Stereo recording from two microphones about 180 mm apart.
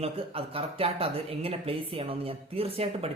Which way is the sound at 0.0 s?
30° right (ahead or behind).